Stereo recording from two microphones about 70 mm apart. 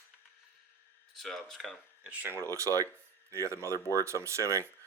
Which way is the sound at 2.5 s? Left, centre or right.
Right.